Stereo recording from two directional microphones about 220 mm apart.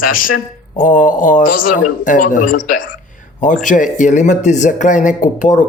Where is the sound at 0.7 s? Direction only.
35° left (ahead or behind).